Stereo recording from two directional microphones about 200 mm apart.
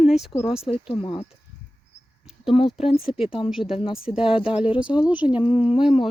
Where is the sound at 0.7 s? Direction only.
25° left (ahead or behind).